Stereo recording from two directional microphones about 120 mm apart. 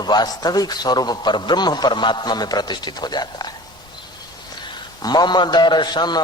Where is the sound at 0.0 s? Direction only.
35° left (ahead or behind).